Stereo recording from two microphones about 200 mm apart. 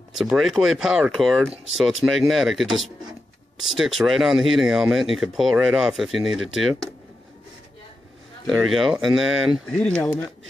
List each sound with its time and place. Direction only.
0.1 s speech: centre (ahead or behind)
8.5 s speech: centre (ahead or behind)